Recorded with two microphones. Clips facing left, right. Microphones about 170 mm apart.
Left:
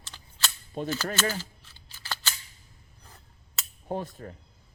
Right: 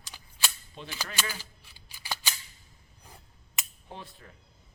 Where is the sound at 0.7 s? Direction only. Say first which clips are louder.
Left 12 dB; 45° left (ahead or behind).